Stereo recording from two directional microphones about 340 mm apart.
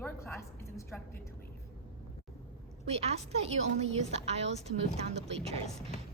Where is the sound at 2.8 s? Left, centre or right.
Centre.